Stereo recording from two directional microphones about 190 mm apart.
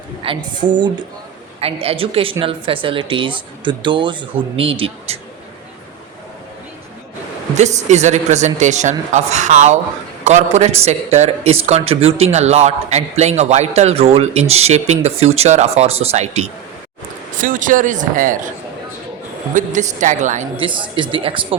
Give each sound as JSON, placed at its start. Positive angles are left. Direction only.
{"t": 0.3, "sound": "a man's voice", "side_deg": -25}
{"t": 7.5, "sound": "a man's voice", "side_deg": -35}
{"t": 19.5, "sound": "a man's voice", "side_deg": -40}
{"t": 20.6, "sound": "speech", "side_deg": -25}